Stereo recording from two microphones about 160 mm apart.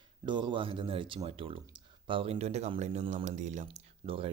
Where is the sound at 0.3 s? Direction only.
30° right (ahead or behind).